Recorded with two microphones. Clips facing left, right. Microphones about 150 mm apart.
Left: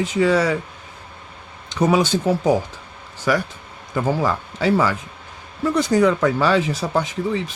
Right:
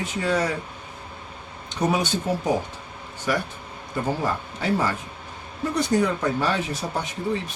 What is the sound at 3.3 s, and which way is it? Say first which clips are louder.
Speech: left 5 dB; 90° left.